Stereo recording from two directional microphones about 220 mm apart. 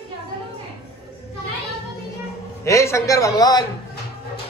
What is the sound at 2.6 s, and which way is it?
Speech, 15° left (ahead or behind).